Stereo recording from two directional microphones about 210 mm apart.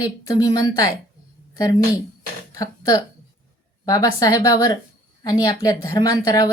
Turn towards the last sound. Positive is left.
turn(degrees=15)  # may be behind; listen again after turning